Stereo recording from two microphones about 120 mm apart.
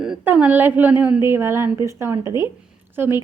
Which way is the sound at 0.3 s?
15° right (ahead or behind).